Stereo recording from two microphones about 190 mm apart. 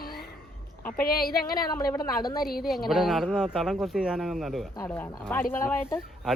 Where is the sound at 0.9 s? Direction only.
50° left (ahead or behind).